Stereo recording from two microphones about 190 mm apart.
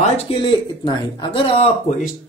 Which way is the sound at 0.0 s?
25° left (ahead or behind).